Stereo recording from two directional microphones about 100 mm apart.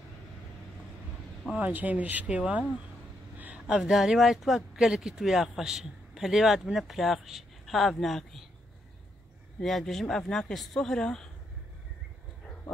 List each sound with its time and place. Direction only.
1.6 s speech: 15° right (ahead or behind); by 8.5 s 5° left (ahead or behind)
9.6 s speech: centre (ahead or behind)